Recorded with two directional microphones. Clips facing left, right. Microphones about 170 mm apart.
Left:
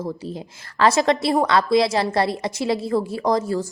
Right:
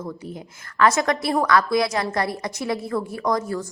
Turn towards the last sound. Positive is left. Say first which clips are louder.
# left 3 dB
turn(degrees=25)  # may be behind; listen again after turning